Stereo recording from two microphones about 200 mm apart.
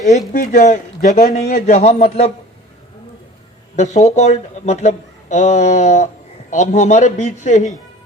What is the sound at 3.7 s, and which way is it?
Speech, 35° left (ahead or behind).